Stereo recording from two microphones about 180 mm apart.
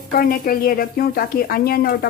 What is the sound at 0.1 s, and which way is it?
A woman's voice, 55° left (ahead or behind).